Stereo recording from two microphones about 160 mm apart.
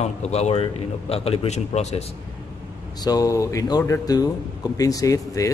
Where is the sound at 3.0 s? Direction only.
25° left (ahead or behind).